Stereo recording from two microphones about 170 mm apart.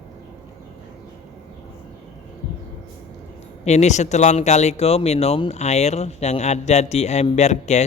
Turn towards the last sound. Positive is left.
turn(degrees=40)  # may be behind; listen again after turning